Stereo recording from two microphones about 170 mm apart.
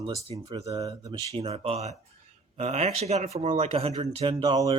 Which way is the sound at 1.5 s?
40° right (ahead or behind).